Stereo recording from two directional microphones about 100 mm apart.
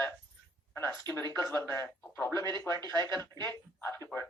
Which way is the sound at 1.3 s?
25° left (ahead or behind).